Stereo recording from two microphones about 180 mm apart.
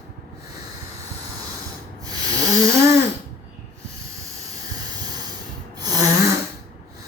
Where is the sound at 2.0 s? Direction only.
20° right (ahead or behind).